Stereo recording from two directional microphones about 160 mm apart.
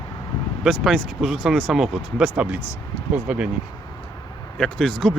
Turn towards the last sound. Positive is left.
turn(degrees=5)  # may be behind; listen again after turning